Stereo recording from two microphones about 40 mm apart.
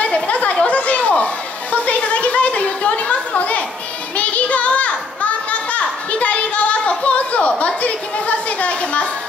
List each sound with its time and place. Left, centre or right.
0.0 s chatter: left
4.2 s children playing: left